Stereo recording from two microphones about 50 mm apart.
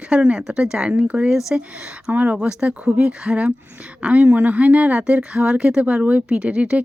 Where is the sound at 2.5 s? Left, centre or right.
Right.